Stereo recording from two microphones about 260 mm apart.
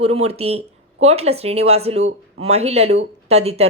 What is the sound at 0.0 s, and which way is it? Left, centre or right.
Speech, right.